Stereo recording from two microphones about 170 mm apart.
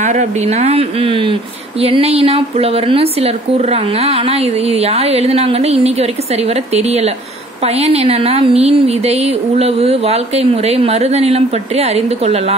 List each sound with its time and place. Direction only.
0.0 s speech: 45° right (ahead or behind)